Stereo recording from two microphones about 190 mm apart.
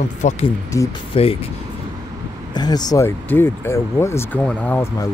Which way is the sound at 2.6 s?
20° left (ahead or behind).